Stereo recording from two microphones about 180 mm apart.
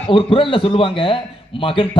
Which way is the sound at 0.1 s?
30° left (ahead or behind).